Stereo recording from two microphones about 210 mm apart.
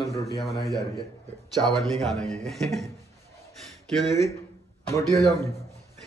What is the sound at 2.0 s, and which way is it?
Speech, centre (ahead or behind).